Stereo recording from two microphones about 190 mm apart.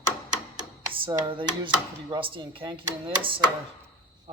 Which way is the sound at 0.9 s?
25° right (ahead or behind).